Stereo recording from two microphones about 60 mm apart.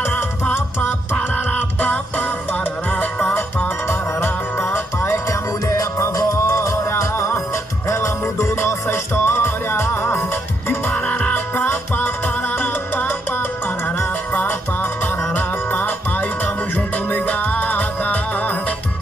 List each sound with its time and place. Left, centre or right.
0.0 s music: left
4.2 s music: left
5.7 s music: left
11.0 s music: left
14.3 s music: left